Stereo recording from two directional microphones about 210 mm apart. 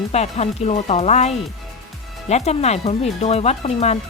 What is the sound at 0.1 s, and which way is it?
Speech, 30° left (ahead or behind).